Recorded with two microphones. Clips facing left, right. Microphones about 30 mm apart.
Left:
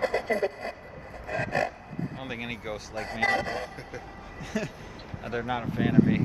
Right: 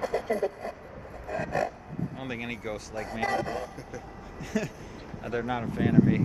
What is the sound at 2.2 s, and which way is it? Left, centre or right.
Speech, centre.